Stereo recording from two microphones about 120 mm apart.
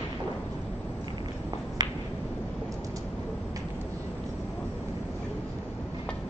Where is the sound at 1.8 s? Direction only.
35° right (ahead or behind).